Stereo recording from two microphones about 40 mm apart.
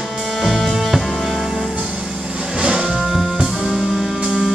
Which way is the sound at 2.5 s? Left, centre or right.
Right.